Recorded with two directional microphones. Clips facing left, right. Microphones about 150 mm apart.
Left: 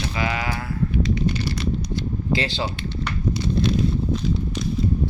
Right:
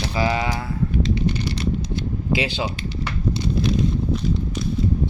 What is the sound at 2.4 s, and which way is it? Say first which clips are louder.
Speech: right 1 dB; 15° right (ahead or behind).